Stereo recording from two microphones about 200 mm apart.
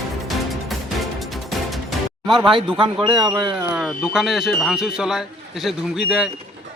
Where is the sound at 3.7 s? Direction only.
Centre (ahead or behind).